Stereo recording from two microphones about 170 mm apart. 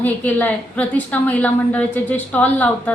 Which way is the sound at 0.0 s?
10° left (ahead or behind).